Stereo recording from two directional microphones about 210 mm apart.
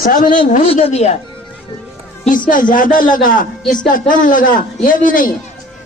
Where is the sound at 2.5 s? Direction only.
40° left (ahead or behind).